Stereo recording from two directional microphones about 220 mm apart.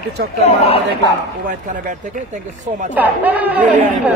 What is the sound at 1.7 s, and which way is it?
Speech, 35° right (ahead or behind).